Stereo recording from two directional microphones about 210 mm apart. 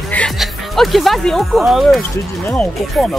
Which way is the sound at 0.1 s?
5° left (ahead or behind).